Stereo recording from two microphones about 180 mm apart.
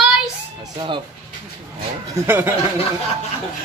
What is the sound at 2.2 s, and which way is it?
Speech, 10° right (ahead or behind).